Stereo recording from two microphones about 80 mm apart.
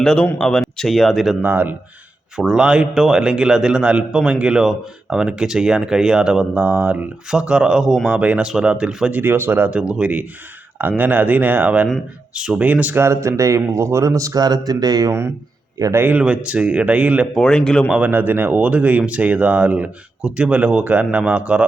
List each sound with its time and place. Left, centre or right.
0.0 s speech: centre
1.4 s speech: right
2.3 s speech: centre
9.1 s speech: right
9.7 s speech: centre
13.0 s speech: right
16.0 s speech: right
16.2 s speech: centre
17.3 s speech: centre
17.8 s speech: centre
18.1 s speech: right